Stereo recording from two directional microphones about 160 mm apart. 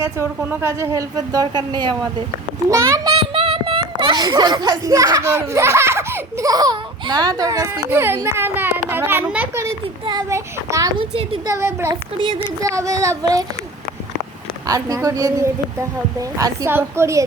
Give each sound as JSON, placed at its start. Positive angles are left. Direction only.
{"t": 0.0, "sound": "a woman's voice", "side_deg": -15}
{"t": 3.2, "sound": "a child's voice", "side_deg": -30}
{"t": 9.6, "sound": "a woman's voice", "side_deg": -20}
{"t": 11.4, "sound": "a woman's voice", "side_deg": -15}
{"t": 14.7, "sound": "a woman's voice", "side_deg": -20}